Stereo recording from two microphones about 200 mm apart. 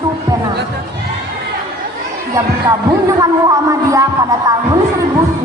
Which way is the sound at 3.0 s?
15° right (ahead or behind).